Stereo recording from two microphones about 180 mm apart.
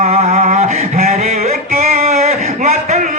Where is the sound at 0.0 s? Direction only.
35° right (ahead or behind).